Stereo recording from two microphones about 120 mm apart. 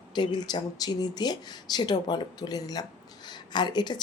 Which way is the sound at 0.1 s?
40° left (ahead or behind).